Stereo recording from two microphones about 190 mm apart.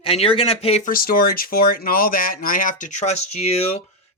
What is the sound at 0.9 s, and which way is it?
Speech, 50° left (ahead or behind).